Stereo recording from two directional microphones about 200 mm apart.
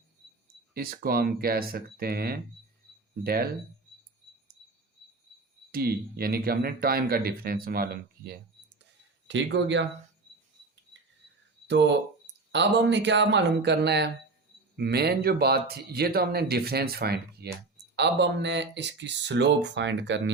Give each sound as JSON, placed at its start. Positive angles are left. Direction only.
{"t": 0.7, "sound": "speech", "side_deg": -50}
{"t": 5.7, "sound": "speech", "side_deg": -50}
{"t": 8.8, "sound": "a sound", "side_deg": -60}
{"t": 11.7, "sound": "speech", "side_deg": -60}